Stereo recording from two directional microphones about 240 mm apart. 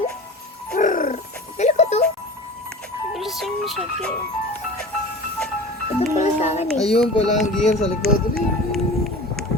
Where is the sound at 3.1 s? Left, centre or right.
Centre.